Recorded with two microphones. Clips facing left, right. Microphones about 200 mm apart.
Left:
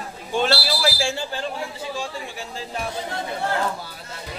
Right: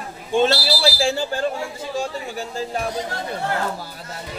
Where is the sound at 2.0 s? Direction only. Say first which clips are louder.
Right 5 dB; 45° right (ahead or behind).